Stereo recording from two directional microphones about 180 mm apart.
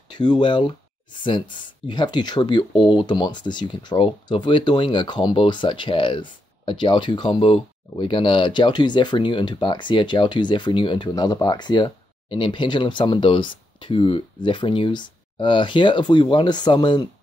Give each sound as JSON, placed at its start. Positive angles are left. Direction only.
{"t": 0.1, "sound": "speech", "side_deg": 25}